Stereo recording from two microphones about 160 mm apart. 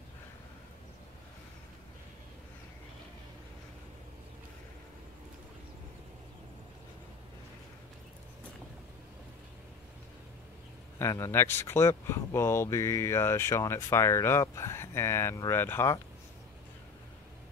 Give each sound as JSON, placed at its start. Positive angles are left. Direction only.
{"t": 11.0, "sound": "speech", "side_deg": 15}